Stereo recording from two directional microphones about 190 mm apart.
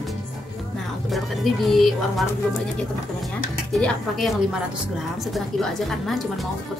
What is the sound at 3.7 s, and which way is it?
A woman's voice, centre (ahead or behind).